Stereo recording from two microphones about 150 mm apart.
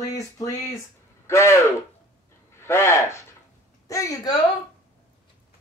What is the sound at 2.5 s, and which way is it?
Speech, 15° left (ahead or behind).